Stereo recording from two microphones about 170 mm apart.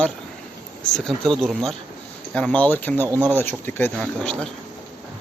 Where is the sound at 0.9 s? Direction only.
Centre (ahead or behind).